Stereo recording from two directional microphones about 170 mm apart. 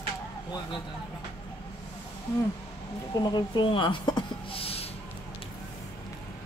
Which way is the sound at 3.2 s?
25° left (ahead or behind).